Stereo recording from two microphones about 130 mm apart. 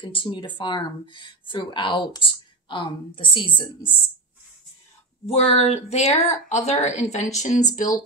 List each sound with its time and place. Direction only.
0.0 s speech: 40° left (ahead or behind)
5.2 s a woman's voice: 50° left (ahead or behind); by 8.0 s 80° left